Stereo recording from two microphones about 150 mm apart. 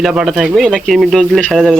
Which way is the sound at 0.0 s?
5° right (ahead or behind).